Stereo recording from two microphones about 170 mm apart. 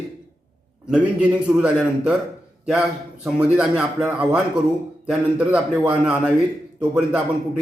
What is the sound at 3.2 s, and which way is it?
A man's voice, 5° right (ahead or behind).